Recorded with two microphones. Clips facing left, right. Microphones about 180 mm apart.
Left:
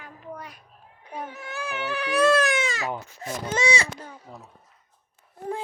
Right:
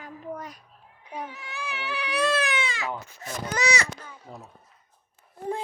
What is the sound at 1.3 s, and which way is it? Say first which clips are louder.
Speech: left 4 dB; 50° left (ahead or behind).